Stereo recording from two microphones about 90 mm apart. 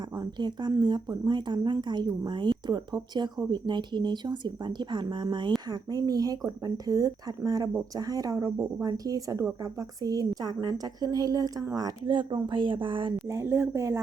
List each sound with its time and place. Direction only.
0.2 s speech: 55° right (ahead or behind)
5.9 s a woman's voice: 45° right (ahead or behind)
12.0 s a woman's voice: 60° right (ahead or behind)
13.3 s a woman's voice: 30° right (ahead or behind)